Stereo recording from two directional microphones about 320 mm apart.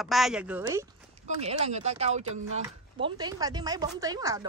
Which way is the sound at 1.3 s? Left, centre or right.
Centre.